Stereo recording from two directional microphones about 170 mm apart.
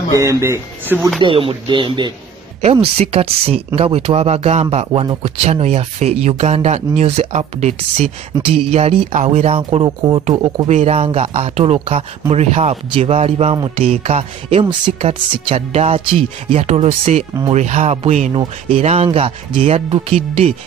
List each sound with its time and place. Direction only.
0.1 s speech: 20° right (ahead or behind)
1.2 s speech: 30° right (ahead or behind)